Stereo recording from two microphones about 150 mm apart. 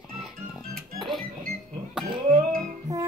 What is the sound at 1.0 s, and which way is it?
Music, centre (ahead or behind).